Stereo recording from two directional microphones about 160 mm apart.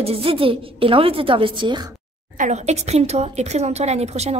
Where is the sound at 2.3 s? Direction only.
50° right (ahead or behind).